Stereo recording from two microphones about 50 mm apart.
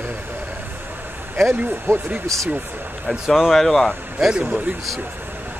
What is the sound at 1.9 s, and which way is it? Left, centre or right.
Speech, right.